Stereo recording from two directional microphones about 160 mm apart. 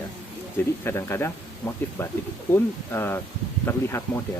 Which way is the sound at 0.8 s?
15° left (ahead or behind).